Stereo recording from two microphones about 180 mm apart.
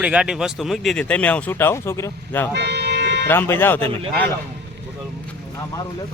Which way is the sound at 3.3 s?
10° left (ahead or behind).